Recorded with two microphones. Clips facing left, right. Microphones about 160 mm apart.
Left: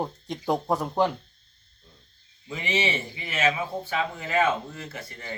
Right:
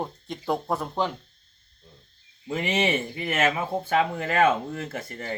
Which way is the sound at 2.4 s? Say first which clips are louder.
Right 3 dB; 55° right (ahead or behind).